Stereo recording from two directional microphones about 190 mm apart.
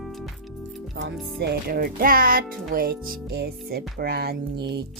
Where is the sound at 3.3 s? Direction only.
55° right (ahead or behind).